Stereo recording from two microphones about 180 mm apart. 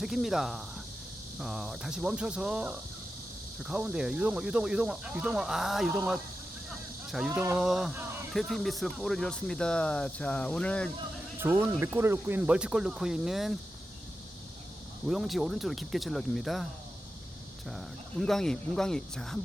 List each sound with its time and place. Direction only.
0.0 s speech: centre (ahead or behind)
7.1 s speech: 5° right (ahead or behind)
11.3 s speech: 10° right (ahead or behind)
15.0 s speech: centre (ahead or behind)
18.2 s speech: 5° left (ahead or behind)